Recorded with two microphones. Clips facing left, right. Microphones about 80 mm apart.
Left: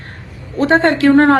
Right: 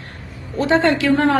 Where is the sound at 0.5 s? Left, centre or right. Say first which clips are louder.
Left 3 dB; left.